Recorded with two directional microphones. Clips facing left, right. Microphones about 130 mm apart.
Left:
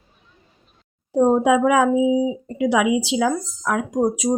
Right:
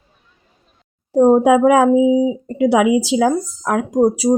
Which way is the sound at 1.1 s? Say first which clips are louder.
Right 5 dB; 40° right (ahead or behind).